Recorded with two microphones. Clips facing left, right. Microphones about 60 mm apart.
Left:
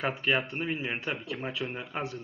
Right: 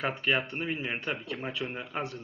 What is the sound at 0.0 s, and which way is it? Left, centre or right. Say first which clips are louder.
Speech: left 1 dB; centre.